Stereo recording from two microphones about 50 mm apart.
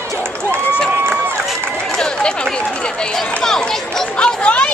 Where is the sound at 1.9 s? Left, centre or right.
Centre.